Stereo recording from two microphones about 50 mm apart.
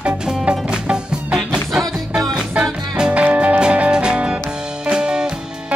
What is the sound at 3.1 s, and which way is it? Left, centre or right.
Music, right.